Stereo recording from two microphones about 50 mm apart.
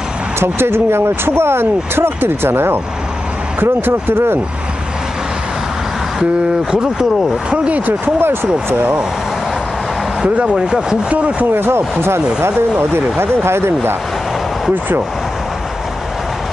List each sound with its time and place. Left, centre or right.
0.4 s speech: right
6.7 s speech: centre
7.5 s speech: right
7.8 s speech: right
10.2 s speech: right
11.5 s speech: right
13.2 s speech: right